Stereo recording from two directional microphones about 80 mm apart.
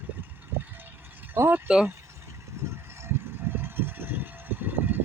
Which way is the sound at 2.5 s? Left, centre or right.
Right.